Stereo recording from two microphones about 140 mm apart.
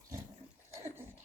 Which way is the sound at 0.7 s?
20° right (ahead or behind).